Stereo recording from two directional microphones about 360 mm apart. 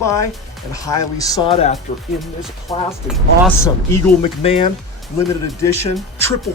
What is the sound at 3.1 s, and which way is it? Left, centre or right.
Speech, centre.